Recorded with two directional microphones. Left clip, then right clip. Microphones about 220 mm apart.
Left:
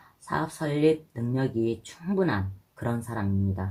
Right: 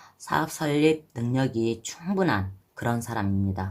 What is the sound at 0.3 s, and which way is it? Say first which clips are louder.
Speech: right 4 dB; 20° right (ahead or behind).